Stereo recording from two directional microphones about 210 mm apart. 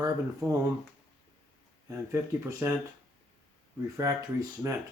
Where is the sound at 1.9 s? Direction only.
15° right (ahead or behind).